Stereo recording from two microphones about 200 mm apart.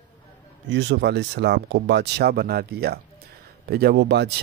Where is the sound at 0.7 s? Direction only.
60° right (ahead or behind).